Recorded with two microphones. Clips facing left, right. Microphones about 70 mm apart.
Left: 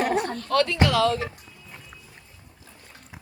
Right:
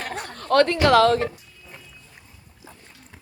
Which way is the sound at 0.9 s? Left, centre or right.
Right.